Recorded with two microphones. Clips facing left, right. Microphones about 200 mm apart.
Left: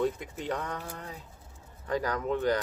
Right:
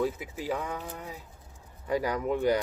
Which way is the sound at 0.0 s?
5° right (ahead or behind).